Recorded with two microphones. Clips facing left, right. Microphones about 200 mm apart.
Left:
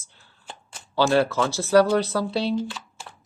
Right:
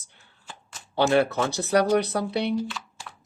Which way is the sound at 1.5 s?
15° right (ahead or behind).